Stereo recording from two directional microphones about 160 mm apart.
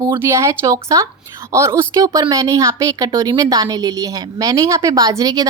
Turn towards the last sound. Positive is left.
turn(degrees=-25)  # may be behind; listen again after turning